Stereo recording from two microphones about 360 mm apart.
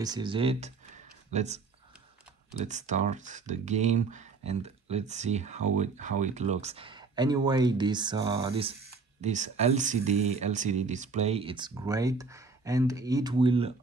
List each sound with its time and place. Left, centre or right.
0.0 s speech: centre
2.6 s speech: centre